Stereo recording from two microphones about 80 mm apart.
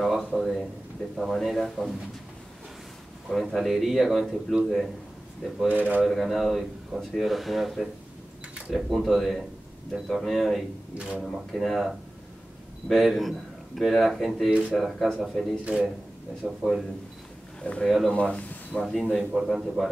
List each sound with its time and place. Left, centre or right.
0.0 s a sound: centre
1.1 s speech: centre
3.3 s speech: centre
5.7 s speech: right
6.0 s speech: centre
11.0 s a man's voice: centre
11.2 s a man's voice: centre
15.6 s a man's voice: centre
17.6 s speech: centre
17.8 s speech: centre
18.1 s speech: centre
19.1 s speech: centre